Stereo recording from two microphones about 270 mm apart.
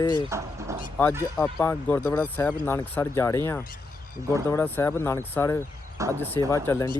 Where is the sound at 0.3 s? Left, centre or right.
Centre.